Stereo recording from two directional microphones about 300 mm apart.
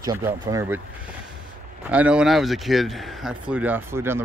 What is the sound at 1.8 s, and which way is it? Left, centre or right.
Speech, centre.